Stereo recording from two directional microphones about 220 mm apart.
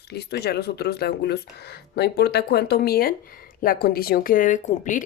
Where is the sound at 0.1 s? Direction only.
45° left (ahead or behind).